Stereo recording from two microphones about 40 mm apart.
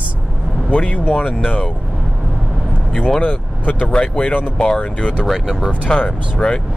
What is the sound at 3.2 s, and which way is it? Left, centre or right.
Speech, left.